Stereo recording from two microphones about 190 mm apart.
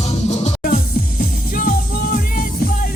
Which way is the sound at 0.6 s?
50° left (ahead or behind).